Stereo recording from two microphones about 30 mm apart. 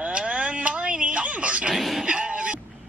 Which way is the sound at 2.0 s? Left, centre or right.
Right.